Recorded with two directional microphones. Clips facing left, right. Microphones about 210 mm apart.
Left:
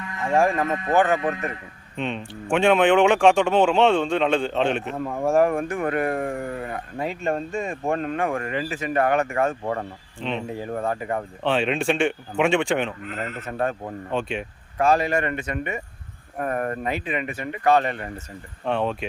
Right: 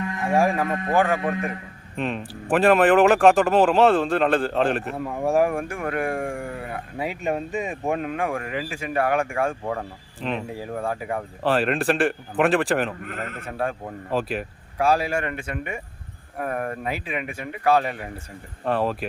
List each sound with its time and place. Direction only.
0.4 s a man's voice: 5° right (ahead or behind)
13.0 s a man's voice: 55° right (ahead or behind)
13.4 s speech: 5° right (ahead or behind)